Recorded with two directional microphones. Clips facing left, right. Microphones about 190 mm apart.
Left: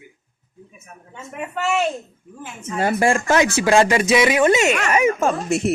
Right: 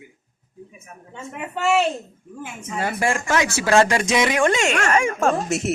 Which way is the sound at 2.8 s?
30° left (ahead or behind).